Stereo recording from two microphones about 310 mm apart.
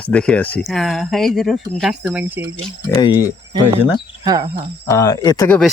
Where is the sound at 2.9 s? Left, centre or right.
Centre.